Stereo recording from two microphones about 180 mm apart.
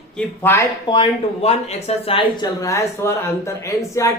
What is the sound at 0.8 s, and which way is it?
Speech, 30° left (ahead or behind).